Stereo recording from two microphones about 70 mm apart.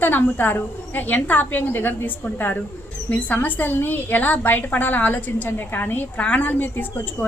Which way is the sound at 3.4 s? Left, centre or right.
Left.